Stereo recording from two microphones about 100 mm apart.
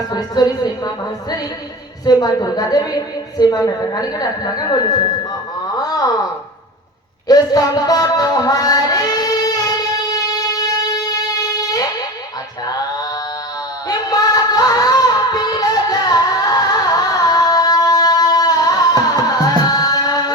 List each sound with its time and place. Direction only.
0.1 s a woman's voice: 40° left (ahead or behind)
5.6 s wail: 40° left (ahead or behind)
7.3 s a sound: 40° left (ahead or behind)
13.8 s singing: 40° left (ahead or behind)
19.4 s tabla: 40° left (ahead or behind)